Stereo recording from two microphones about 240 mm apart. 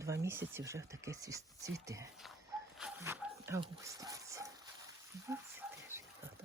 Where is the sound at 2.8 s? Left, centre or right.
Centre.